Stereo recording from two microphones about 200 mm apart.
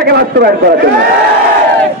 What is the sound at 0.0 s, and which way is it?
Speech, 50° right (ahead or behind).